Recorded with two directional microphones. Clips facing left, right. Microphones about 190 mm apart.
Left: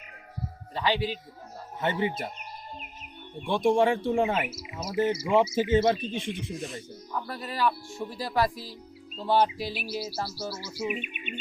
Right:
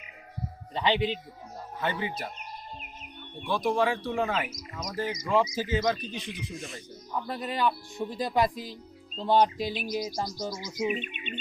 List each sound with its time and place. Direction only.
0.7 s speech: 20° right (ahead or behind)
1.8 s speech: 25° left (ahead or behind)
3.4 s speech: 25° left (ahead or behind)
4.5 s speech: 10° left (ahead or behind)
5.3 s speech: 20° left (ahead or behind)
7.2 s speech: 20° right (ahead or behind)
9.7 s speech: 10° left (ahead or behind)